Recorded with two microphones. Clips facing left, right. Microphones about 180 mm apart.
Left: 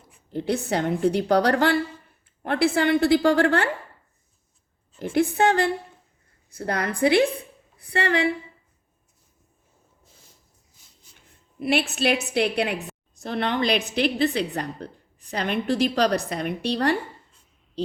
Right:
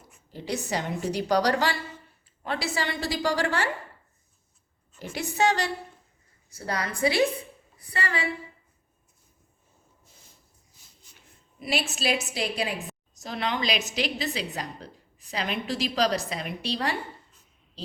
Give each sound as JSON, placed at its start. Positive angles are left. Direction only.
{"t": 0.3, "sound": "a woman's voice", "side_deg": 60}
{"t": 5.1, "sound": "a woman's voice", "side_deg": 55}
{"t": 7.8, "sound": "a woman's voice", "side_deg": 65}
{"t": 11.6, "sound": "a woman's voice", "side_deg": 60}